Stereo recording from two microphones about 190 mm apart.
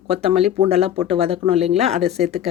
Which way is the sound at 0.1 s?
30° right (ahead or behind).